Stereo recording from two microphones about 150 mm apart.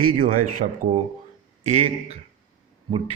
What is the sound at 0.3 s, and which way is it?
Speech, 50° right (ahead or behind).